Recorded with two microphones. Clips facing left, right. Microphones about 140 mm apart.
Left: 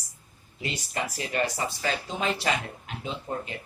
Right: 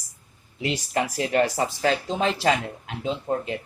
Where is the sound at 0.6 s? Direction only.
85° right.